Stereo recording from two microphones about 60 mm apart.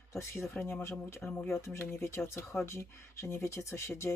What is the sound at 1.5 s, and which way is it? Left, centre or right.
Speech, left.